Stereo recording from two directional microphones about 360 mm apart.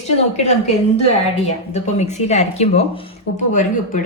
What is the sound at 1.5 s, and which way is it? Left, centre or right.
Speech, centre.